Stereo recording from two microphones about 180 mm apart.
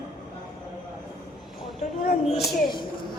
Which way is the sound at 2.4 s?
25° left (ahead or behind).